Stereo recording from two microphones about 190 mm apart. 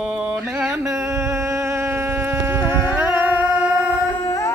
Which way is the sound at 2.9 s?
10° right (ahead or behind).